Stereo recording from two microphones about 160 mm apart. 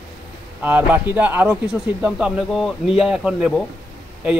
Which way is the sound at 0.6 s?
10° right (ahead or behind).